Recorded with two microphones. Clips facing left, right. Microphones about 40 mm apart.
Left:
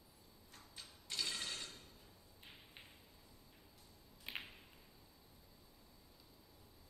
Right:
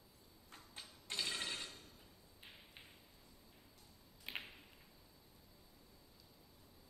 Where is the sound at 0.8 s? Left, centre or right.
Centre.